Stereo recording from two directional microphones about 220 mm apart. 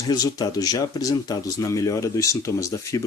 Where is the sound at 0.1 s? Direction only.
15° left (ahead or behind).